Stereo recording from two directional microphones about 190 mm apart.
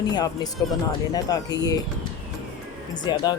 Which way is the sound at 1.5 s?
20° left (ahead or behind).